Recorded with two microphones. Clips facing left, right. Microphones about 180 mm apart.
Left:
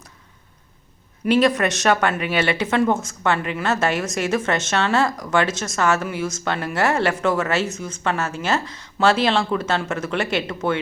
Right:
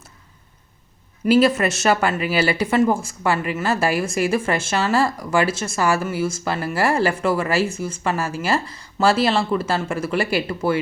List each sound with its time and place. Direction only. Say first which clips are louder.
1.2 s a woman's voice: right 2 dB; 5° right (ahead or behind)